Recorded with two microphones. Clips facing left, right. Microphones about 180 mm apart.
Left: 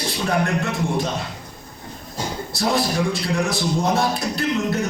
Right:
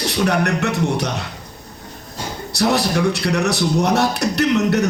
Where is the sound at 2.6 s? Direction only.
75° right (ahead or behind).